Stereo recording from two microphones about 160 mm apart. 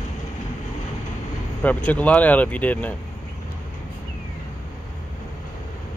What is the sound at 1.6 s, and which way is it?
Speech, 10° left (ahead or behind).